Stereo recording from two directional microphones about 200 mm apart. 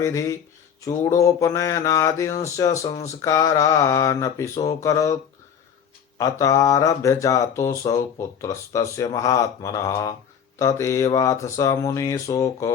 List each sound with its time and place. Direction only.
0.0 s speech: 15° left (ahead or behind)
6.1 s speech: 15° left (ahead or behind)